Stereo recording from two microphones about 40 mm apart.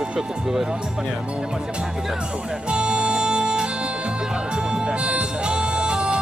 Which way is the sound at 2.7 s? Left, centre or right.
Right.